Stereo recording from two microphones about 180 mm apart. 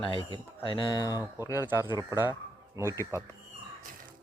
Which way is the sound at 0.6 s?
25° left (ahead or behind).